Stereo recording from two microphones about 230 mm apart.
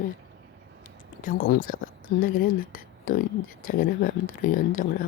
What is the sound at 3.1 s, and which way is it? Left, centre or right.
Speech, left.